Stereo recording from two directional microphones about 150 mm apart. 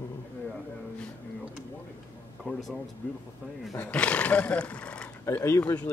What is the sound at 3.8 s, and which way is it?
Speech, 10° left (ahead or behind).